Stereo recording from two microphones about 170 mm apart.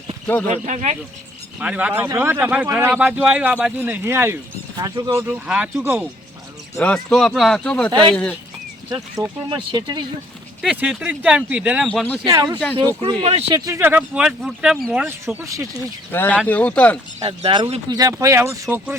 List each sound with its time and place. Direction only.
0.4 s speech: 45° right (ahead or behind)
1.5 s speech: 5° right (ahead or behind); by 5.2 s 25° right (ahead or behind)
5.2 s speech: 10° right (ahead or behind)
6.7 s speech: 5° left (ahead or behind)
9.2 s speech: 20° right (ahead or behind)
10.6 s speech: 5° right (ahead or behind)
11.9 s speech: 5° left (ahead or behind)
12.2 s speech: 25° right (ahead or behind)
13.0 s speech: 35° right (ahead or behind)
13.7 s speech: 15° right (ahead or behind)
16.1 s speech: 10° left (ahead or behind)
17.2 s speech: 30° right (ahead or behind); by 18.9 s 15° right (ahead or behind)